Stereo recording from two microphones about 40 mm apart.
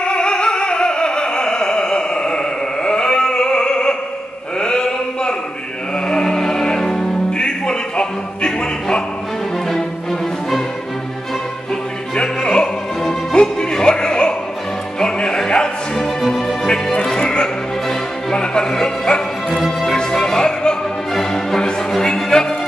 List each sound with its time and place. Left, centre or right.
0.0 s opera: left
4.6 s chant: centre
6.0 s music: centre
12.2 s music: left